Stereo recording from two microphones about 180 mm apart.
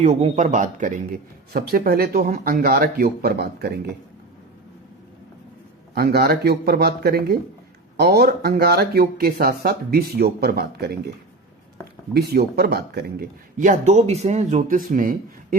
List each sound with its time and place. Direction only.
0.0 s speech: 35° right (ahead or behind)
0.4 s speech: 45° right (ahead or behind)
5.9 s speech: 60° right (ahead or behind)
12.1 s speech: 60° right (ahead or behind)
13.6 s speech: 40° right (ahead or behind)